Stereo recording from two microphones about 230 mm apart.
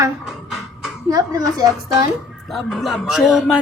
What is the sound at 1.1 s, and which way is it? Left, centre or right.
Speech, centre.